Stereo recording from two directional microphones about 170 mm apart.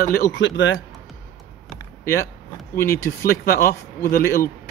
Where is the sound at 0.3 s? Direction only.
90° left.